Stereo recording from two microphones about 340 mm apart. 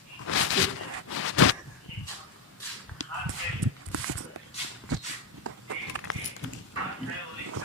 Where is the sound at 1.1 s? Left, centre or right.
Left.